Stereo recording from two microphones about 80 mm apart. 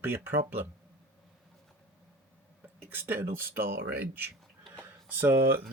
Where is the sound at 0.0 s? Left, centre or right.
Right.